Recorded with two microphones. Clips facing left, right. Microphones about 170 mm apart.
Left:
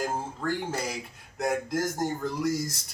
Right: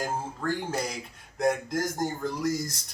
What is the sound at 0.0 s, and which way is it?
Speech, centre (ahead or behind).